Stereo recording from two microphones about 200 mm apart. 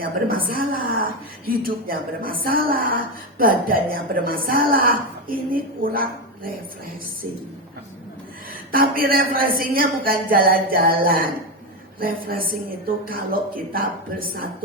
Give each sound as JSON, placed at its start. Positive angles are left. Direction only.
{"t": 0.0, "sound": "a woman's voice", "side_deg": -45}
{"t": 8.7, "sound": "a woman's voice", "side_deg": -45}